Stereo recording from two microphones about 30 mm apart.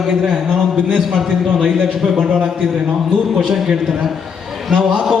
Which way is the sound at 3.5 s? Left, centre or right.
Centre.